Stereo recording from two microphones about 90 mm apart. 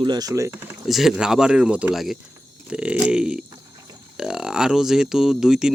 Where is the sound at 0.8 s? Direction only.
Centre (ahead or behind).